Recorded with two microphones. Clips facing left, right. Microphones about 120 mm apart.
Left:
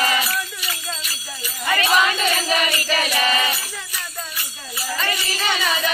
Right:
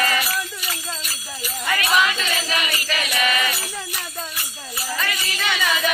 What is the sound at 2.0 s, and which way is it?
Music, 40° left (ahead or behind).